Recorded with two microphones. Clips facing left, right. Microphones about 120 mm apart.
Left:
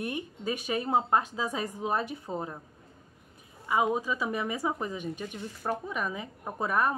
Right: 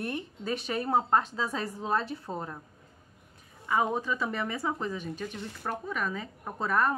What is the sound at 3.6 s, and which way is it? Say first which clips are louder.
Speech: left 1 dB; 10° left (ahead or behind).